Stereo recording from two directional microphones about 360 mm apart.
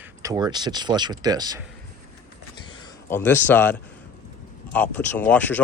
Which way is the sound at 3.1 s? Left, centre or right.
Centre.